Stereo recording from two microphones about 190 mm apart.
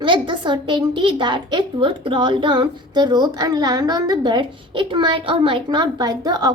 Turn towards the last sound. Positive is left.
turn(degrees=-20)  # may be behind; listen again after turning